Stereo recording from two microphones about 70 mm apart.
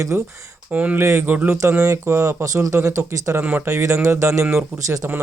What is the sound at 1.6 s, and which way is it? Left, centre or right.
Speech, right.